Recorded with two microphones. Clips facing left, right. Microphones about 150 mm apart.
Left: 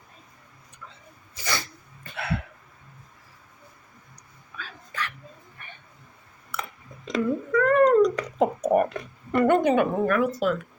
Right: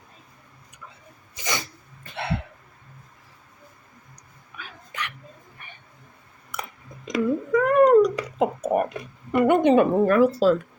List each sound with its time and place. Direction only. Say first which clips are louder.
1.4 s throat clearing: right 1 dB; 20° right (ahead or behind)
2.1 s hiccup: right 1 dB; 25° right (ahead or behind)
4.5 s dog: left 1 dB; 15° right (ahead or behind)
6.5 s cat: even; 15° right (ahead or behind)
9.6 s speech: right 4 dB; 30° right (ahead or behind)